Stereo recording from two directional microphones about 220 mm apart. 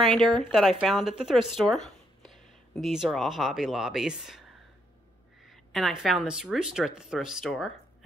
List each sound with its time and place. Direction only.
0.0 s speech: centre (ahead or behind)
5.5 s speech: centre (ahead or behind)